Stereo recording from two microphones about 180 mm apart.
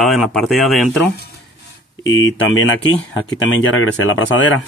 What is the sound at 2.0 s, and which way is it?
Speech, 90° left.